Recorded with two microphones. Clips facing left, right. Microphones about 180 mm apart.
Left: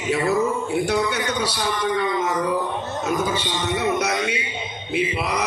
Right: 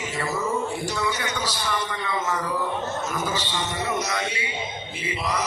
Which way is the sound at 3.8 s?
60° left (ahead or behind).